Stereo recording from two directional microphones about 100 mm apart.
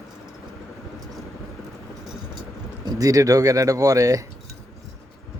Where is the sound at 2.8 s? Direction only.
40° right (ahead or behind).